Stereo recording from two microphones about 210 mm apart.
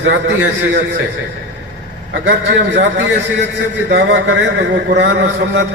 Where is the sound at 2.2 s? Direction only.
60° right (ahead or behind).